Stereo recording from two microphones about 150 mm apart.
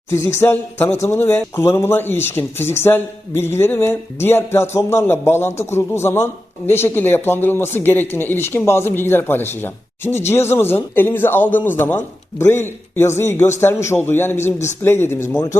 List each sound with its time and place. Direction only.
0.1 s speech: 20° left (ahead or behind)